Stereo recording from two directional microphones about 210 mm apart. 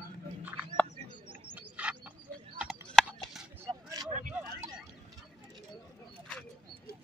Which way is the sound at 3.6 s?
15° right (ahead or behind).